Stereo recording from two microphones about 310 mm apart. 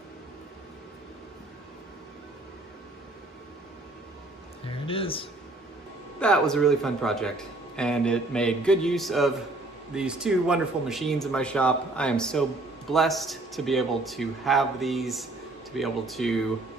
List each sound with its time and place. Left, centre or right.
4.6 s speech: centre
6.1 s a man's voice: centre